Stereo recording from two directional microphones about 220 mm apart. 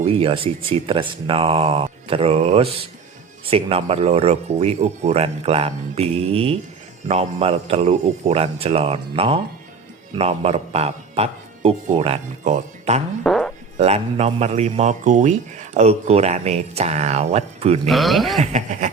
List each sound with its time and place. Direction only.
0.0 s a man's voice: 25° right (ahead or behind)
13.2 s music: centre (ahead or behind)
13.7 s a man's voice: 30° right (ahead or behind)
17.8 s speech: centre (ahead or behind)
18.3 s speech: 35° right (ahead or behind)